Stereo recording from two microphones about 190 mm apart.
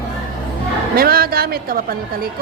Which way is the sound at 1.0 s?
50° right (ahead or behind).